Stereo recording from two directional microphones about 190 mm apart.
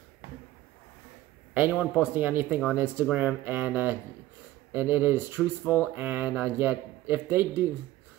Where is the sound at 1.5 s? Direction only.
5° right (ahead or behind).